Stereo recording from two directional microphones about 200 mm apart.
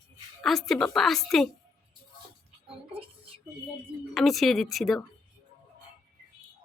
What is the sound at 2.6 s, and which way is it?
Music, 25° right (ahead or behind).